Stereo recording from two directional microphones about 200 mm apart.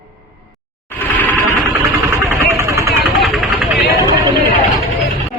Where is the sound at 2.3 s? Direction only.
15° right (ahead or behind).